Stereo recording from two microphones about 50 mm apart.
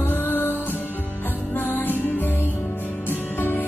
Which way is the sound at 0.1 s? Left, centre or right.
Left.